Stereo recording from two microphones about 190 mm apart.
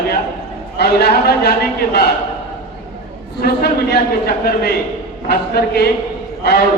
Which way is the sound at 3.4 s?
55° left (ahead or behind).